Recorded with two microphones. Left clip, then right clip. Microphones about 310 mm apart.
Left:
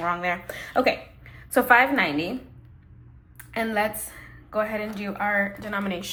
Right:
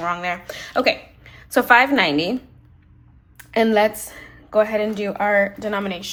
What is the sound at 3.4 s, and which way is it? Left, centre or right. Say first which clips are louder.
A woman's voice: right 9 dB; centre.